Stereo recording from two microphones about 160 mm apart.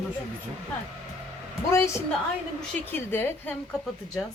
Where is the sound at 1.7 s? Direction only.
15° left (ahead or behind).